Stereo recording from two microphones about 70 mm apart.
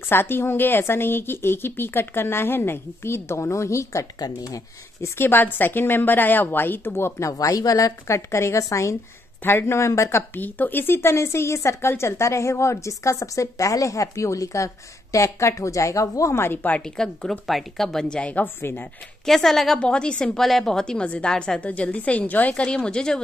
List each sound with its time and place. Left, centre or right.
0.1 s speech: left
4.2 s speech: left
5.0 s speech: left
7.2 s a woman's voice: left
9.4 s speech: left
10.4 s a woman's voice: left
16.3 s speech: left
16.8 s a woman's voice: centre; by 18.9 s left
19.2 s a woman's voice: centre
19.8 s a woman's voice: centre